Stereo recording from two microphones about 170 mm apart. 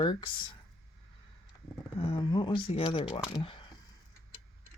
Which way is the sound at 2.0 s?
30° left (ahead or behind).